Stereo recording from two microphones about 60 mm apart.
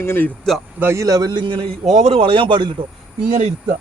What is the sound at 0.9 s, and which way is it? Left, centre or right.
Speech, right.